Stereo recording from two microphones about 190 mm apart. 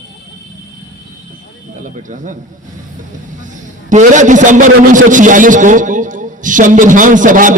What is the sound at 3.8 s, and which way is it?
A man's voice, 40° right (ahead or behind).